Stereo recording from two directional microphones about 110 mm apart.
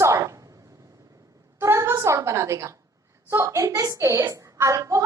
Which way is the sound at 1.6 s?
25° right (ahead or behind).